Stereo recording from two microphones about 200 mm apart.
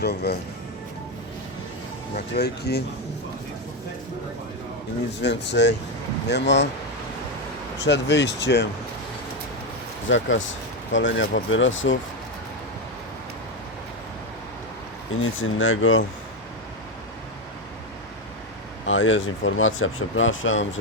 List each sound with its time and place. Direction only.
0.0 s speech: 55° left (ahead or behind)
2.3 s speech: 55° left (ahead or behind)
5.2 s speech: 60° left (ahead or behind)
7.9 s speech: 60° left (ahead or behind)
10.1 s speech: 70° left (ahead or behind)
15.2 s speech: 80° left
18.9 s speech: 75° left (ahead or behind)